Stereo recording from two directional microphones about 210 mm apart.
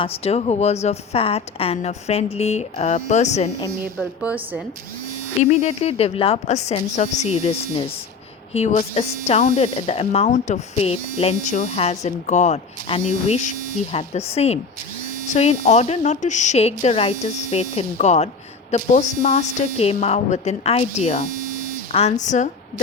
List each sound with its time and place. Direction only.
0.0 s speech: 30° left (ahead or behind)
4.2 s speech: 5° right (ahead or behind)
5.4 s speech: 35° left (ahead or behind)